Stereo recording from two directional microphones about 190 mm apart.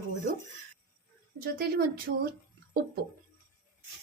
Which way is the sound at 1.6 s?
50° right (ahead or behind).